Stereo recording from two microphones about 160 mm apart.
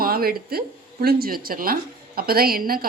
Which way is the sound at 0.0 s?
70° right (ahead or behind).